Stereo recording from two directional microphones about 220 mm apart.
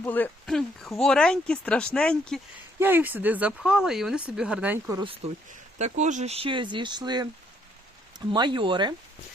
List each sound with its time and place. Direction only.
0.0 s speech: 10° left (ahead or behind)
2.7 s speech: 10° right (ahead or behind)
4.9 s speech: 25° right (ahead or behind)
8.3 s speech: 20° right (ahead or behind)